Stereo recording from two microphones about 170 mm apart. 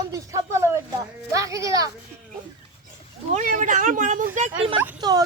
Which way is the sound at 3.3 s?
45° right (ahead or behind).